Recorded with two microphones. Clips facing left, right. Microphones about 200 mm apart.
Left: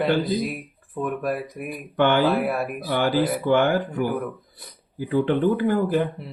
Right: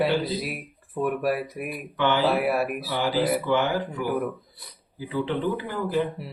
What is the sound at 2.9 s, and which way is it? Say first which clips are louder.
Speech: left 4 dB; 55° left (ahead or behind).